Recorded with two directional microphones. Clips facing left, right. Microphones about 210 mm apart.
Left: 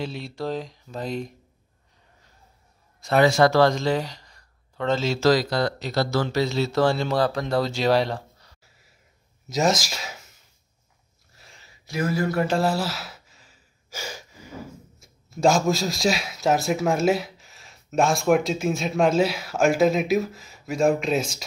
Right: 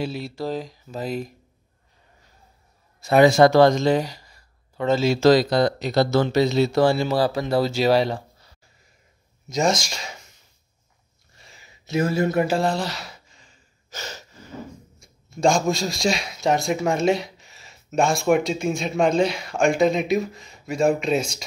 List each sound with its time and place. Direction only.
0.0 s speech: 5° right (ahead or behind)
3.0 s speech: 15° right (ahead or behind); by 10.2 s 5° left (ahead or behind)
11.3 s a sound: centre (ahead or behind)
11.6 s speech: 25° right (ahead or behind)
12.4 s speech: 5° left (ahead or behind)